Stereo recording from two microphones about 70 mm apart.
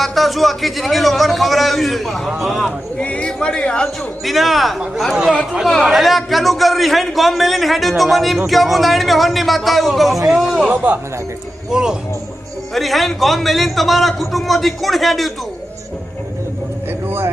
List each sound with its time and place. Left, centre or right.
0.0 s a man's voice: centre
3.0 s speech: centre
4.2 s a man's voice: centre
10.7 s speech: right
11.7 s a man's voice: centre
17.1 s a sound: right